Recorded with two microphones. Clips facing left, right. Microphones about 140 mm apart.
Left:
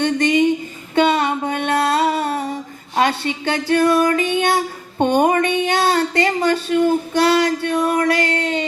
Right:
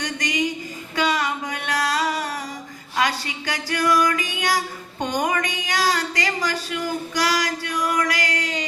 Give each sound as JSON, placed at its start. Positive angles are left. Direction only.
{"t": 0.0, "sound": "a sound", "side_deg": 25}
{"t": 3.7, "sound": "female singing", "side_deg": 25}
{"t": 5.6, "sound": "child singing", "side_deg": 25}